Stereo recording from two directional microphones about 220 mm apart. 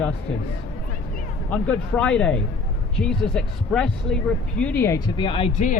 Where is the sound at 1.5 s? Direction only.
5° left (ahead or behind).